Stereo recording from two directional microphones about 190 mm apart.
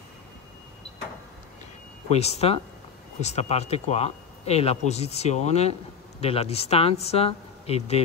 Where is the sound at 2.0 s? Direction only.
35° left (ahead or behind).